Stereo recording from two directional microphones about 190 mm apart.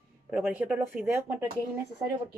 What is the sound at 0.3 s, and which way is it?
Speech, 10° right (ahead or behind).